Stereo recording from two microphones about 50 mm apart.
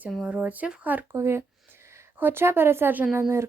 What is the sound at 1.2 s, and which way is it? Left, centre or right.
Speech, right.